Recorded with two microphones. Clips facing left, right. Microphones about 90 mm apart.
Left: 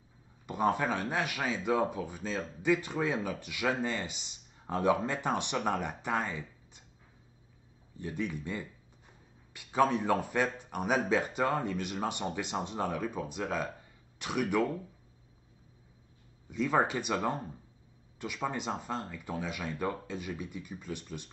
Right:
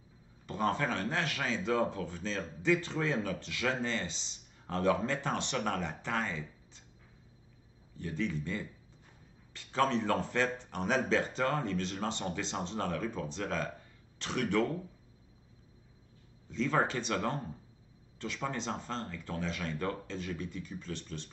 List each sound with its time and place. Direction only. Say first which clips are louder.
0.5 s speech: left 3 dB; 15° left (ahead or behind)
8.0 s speech: even; 15° left (ahead or behind)
9.5 s speech: left 3 dB; 15° left (ahead or behind)
16.4 s speech: left 2 dB; 10° left (ahead or behind)